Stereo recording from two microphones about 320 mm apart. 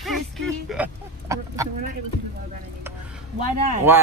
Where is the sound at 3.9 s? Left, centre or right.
Centre.